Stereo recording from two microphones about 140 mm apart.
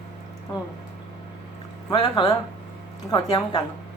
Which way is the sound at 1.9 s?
35° left (ahead or behind).